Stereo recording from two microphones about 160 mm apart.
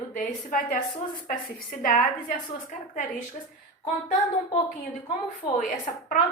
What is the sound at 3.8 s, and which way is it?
A woman's voice, 50° left (ahead or behind).